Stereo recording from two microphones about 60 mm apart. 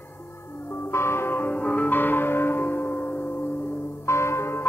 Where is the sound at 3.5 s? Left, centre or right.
Centre.